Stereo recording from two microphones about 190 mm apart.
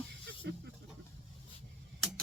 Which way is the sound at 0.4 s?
65° right (ahead or behind).